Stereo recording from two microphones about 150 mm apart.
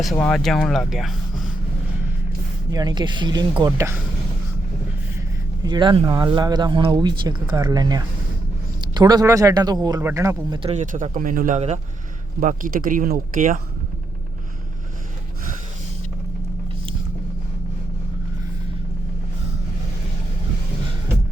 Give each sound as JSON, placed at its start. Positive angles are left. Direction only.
{"t": 0.2, "sound": "speech", "side_deg": 5}
{"t": 2.7, "sound": "speech", "side_deg": -30}
{"t": 3.7, "sound": "speech", "side_deg": -15}
{"t": 5.6, "sound": "speech", "side_deg": -30}
{"t": 10.6, "sound": "speech", "side_deg": -45}
{"t": 10.9, "sound": "a man's voice", "side_deg": -60}
{"t": 12.4, "sound": "speech", "side_deg": -65}